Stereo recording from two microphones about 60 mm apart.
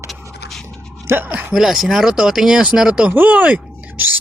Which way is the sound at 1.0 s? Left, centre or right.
Right.